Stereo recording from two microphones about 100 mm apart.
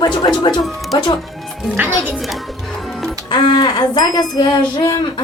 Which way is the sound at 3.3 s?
45° left (ahead or behind).